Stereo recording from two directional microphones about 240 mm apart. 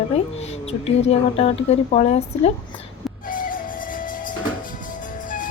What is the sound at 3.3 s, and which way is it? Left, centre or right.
Music, left.